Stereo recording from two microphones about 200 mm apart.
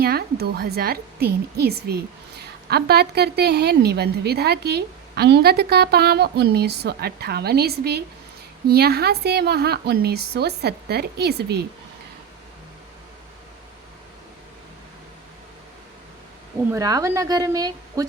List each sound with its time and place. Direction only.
0.0 s a woman's voice: 50° right (ahead or behind)
16.7 s a woman's voice: 15° right (ahead or behind)